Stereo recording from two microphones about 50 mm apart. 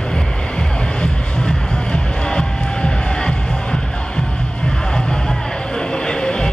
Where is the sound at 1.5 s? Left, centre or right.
Centre.